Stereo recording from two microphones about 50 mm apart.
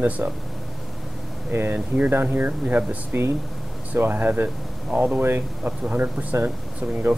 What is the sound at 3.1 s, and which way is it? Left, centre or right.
Speech, right.